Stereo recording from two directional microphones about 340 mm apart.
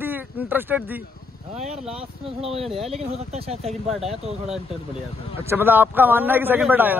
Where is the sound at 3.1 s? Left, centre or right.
Centre.